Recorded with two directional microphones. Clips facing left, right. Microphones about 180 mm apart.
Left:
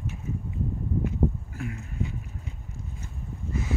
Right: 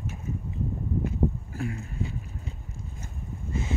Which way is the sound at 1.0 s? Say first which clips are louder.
Left 1 dB; 30° right (ahead or behind).